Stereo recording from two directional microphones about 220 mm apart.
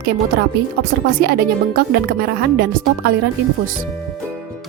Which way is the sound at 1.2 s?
45° right (ahead or behind).